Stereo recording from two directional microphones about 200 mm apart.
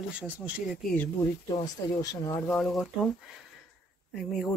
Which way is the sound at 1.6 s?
20° left (ahead or behind).